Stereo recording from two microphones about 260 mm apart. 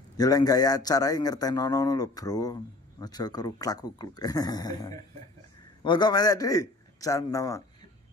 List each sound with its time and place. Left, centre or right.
0.2 s a man's voice: centre